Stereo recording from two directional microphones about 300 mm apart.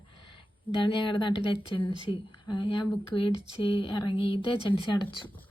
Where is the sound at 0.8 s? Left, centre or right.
Centre.